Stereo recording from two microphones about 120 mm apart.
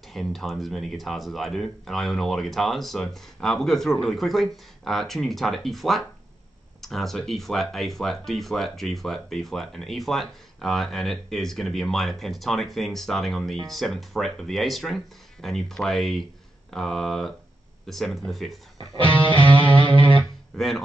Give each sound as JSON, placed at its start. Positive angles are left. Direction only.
{"t": 0.1, "sound": "speech", "side_deg": 0}
{"t": 19.2, "sound": "music", "side_deg": -45}
{"t": 20.2, "sound": "guitar", "side_deg": 5}